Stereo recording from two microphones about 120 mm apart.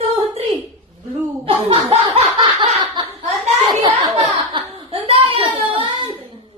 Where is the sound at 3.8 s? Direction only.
35° right (ahead or behind).